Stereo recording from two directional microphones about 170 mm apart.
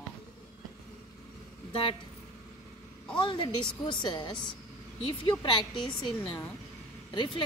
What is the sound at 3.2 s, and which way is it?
A woman's voice, 30° left (ahead or behind).